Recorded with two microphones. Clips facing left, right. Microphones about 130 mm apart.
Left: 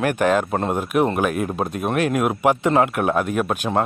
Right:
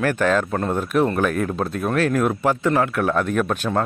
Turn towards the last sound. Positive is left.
turn(degrees=10)  # may be behind; listen again after turning